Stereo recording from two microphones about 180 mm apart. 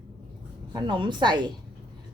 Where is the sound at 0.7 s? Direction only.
25° right (ahead or behind).